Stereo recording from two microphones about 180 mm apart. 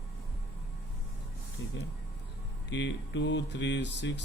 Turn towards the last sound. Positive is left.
turn(degrees=75)  # may be behind; listen again after turning